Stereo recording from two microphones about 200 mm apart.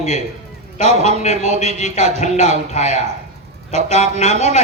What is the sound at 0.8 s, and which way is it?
Speech, 30° right (ahead or behind).